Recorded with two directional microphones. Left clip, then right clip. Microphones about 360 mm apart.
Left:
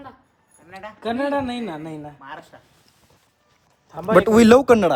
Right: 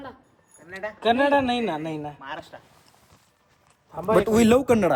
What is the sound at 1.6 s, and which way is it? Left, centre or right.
Speech, right.